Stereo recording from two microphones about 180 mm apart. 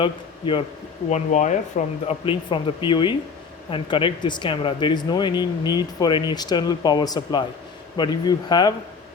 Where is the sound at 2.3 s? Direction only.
30° left (ahead or behind).